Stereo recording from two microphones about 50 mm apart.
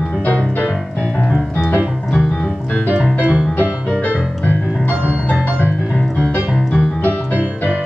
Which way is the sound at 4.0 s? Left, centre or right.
Left.